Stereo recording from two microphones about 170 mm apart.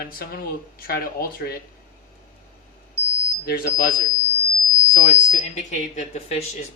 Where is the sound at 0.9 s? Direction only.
65° left (ahead or behind).